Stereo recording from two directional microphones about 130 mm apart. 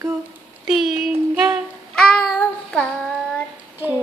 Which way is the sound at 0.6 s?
Centre (ahead or behind).